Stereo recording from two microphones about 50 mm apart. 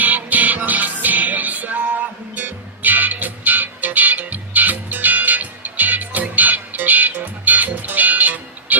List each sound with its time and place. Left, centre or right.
0.0 s music: right